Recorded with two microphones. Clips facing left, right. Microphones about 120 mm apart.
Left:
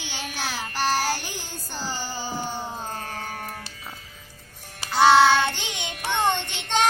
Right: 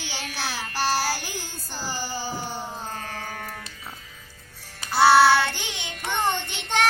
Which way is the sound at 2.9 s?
40° left (ahead or behind).